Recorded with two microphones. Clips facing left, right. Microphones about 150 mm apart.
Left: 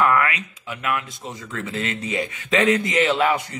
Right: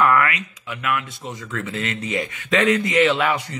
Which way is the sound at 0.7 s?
35° left (ahead or behind).